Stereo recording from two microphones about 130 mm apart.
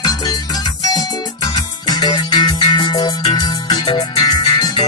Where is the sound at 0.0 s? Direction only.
30° left (ahead or behind).